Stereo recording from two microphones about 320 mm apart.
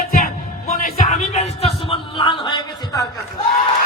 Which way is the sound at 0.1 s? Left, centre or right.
Left.